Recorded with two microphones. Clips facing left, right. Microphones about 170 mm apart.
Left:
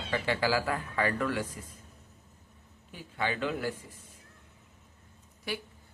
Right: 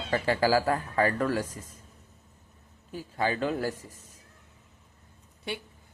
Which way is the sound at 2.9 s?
40° right (ahead or behind).